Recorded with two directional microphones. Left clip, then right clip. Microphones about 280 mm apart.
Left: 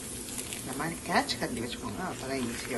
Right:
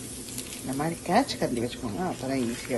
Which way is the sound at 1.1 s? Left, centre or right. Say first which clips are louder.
Right 4 dB; centre.